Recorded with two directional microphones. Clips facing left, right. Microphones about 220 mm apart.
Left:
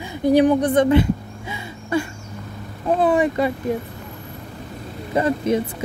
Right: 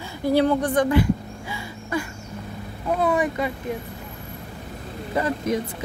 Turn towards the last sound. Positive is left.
turn(degrees=25)  # may be behind; listen again after turning